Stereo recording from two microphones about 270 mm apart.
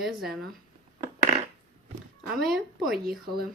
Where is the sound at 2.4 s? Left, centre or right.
Centre.